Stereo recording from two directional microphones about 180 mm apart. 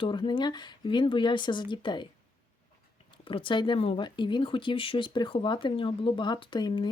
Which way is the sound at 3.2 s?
30° left (ahead or behind).